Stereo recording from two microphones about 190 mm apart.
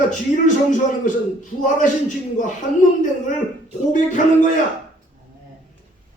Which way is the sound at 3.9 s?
40° left (ahead or behind).